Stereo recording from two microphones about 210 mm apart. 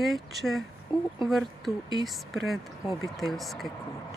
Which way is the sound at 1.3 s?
Centre (ahead or behind).